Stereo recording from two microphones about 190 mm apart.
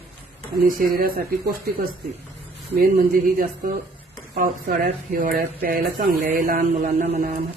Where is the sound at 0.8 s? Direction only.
50° right (ahead or behind).